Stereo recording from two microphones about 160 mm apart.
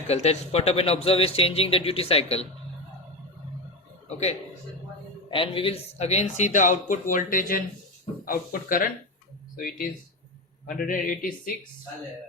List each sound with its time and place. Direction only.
0.1 s speech: 40° left (ahead or behind)
5.3 s speech: 35° left (ahead or behind); by 11.3 s 60° left (ahead or behind)